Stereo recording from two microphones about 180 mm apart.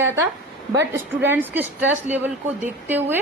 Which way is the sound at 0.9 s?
10° right (ahead or behind).